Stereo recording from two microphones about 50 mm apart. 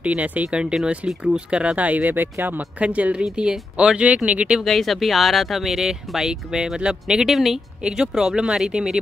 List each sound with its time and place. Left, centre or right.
0.0 s speech: right
0.8 s speech: centre; by 2.6 s right
2.8 s speech: right
4.6 s speech: centre
7.8 s speech: centre